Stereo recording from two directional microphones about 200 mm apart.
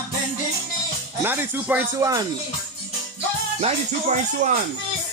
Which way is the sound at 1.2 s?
10° right (ahead or behind).